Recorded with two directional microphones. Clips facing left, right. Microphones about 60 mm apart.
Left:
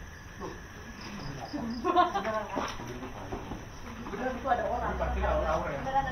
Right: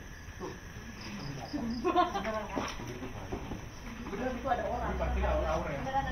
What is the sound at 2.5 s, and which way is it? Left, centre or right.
Speech, left.